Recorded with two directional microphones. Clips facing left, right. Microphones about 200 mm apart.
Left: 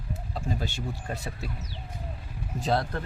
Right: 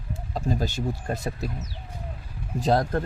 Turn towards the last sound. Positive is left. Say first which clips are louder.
# right 5 dB
turn(degrees=-45)  # may be behind; listen again after turning